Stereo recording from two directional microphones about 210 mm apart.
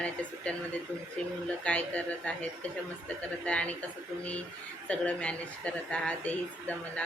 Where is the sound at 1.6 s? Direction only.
5° left (ahead or behind).